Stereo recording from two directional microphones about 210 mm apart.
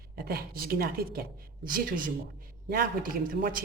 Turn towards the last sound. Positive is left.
turn(degrees=-40)  # may be behind; listen again after turning